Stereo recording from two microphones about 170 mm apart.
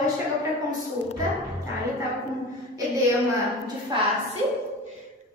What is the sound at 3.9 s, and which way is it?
Speech, 25° right (ahead or behind).